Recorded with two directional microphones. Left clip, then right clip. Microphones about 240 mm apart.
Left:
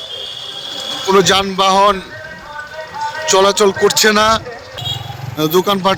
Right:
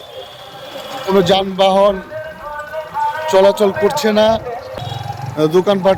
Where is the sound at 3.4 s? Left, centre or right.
Centre.